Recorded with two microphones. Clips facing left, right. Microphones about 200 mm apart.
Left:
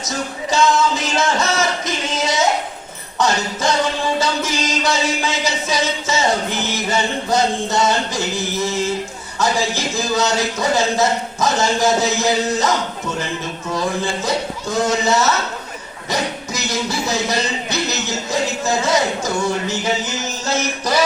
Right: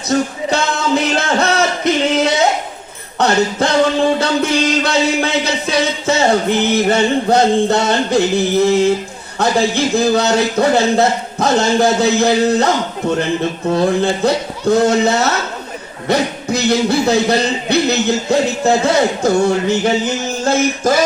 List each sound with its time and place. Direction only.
0.1 s a sound: 60° right (ahead or behind)
3.2 s music: 60° right (ahead or behind)
16.0 s speech: 60° right (ahead or behind)
18.9 s music: 60° right (ahead or behind)